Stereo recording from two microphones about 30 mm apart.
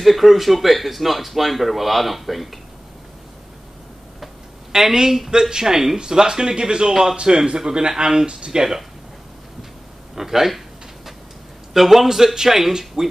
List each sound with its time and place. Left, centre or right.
0.0 s speech: centre
4.7 s speech: centre
6.9 s speech: centre
7.4 s speech: right
8.3 s speech: right
10.1 s speech: centre
11.7 s speech: centre